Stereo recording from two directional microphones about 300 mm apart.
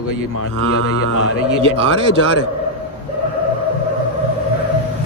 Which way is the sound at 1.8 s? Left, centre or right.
Left.